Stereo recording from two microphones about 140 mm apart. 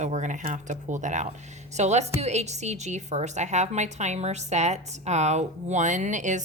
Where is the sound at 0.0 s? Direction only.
60° right (ahead or behind).